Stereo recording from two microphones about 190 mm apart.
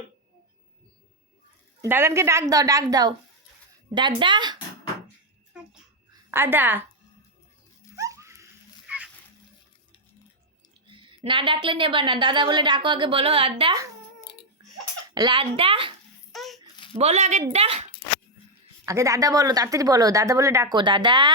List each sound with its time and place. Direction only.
1.8 s a woman's voice: 10° right (ahead or behind)
5.5 s babbling: 5° right (ahead or behind)
6.3 s a woman's voice: 10° right (ahead or behind)
7.9 s a sound: 15° right (ahead or behind)
10.8 s a woman's voice: 25° right (ahead or behind)
15.1 s a woman's voice: 25° right (ahead or behind)
16.3 s a sound: centre (ahead or behind)
17.0 s speech: 35° right (ahead or behind)
18.9 s a woman's voice: 15° right (ahead or behind)